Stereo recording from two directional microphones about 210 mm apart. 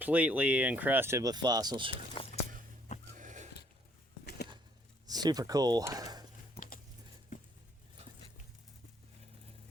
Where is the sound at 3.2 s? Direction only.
35° right (ahead or behind).